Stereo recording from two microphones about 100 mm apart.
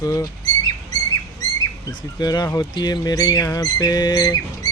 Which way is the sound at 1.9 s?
45° left (ahead or behind).